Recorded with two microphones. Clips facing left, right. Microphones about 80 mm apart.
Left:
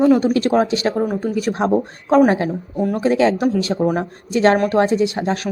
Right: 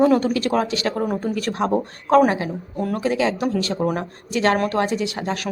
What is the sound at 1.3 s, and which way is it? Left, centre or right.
Speech, centre.